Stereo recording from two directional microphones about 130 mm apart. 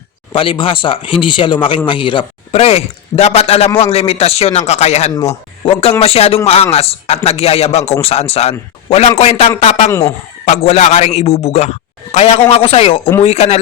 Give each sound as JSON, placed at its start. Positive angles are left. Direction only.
{"t": 0.3, "sound": "a man's voice", "side_deg": 40}
{"t": 9.9, "sound": "speech", "side_deg": 20}
{"t": 10.4, "sound": "a man's voice", "side_deg": 60}